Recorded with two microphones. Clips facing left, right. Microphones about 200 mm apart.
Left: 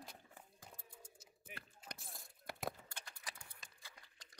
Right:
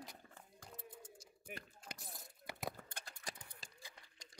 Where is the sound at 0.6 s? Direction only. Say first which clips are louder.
Right 8 dB; 10° left (ahead or behind).